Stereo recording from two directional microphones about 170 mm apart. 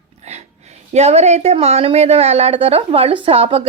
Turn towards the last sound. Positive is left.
turn(degrees=-35)  # may be behind; listen again after turning